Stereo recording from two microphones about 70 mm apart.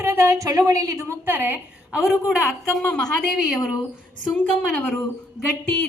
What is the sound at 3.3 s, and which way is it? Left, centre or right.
Speech, centre.